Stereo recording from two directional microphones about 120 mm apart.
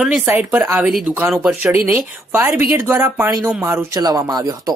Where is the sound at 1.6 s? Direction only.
15° right (ahead or behind).